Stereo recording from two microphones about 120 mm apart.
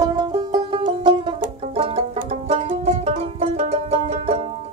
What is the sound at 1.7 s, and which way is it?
Music, 55° right (ahead or behind).